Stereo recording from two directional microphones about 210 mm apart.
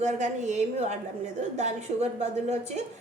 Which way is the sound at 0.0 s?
35° right (ahead or behind).